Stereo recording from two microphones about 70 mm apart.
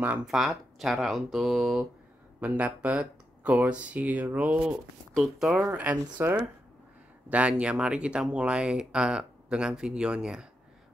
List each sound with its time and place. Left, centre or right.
0.2 s speech: centre
2.4 s speech: right
5.1 s speech: centre
5.7 s speech: right
7.2 s speech: centre